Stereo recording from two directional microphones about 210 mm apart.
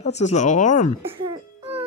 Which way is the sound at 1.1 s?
25° right (ahead or behind).